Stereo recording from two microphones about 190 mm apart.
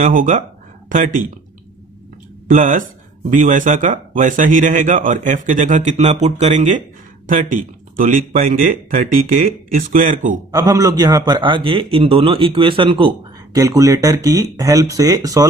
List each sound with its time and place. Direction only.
0.0 s speech: 45° right (ahead or behind)
2.4 s speech: 45° right (ahead or behind)
10.5 s a man's voice: 20° right (ahead or behind)